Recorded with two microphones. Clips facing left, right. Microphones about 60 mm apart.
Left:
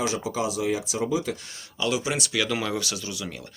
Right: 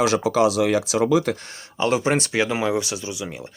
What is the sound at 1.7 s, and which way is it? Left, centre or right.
Speech, right.